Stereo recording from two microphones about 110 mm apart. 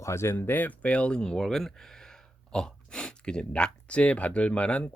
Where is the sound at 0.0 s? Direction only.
25° left (ahead or behind).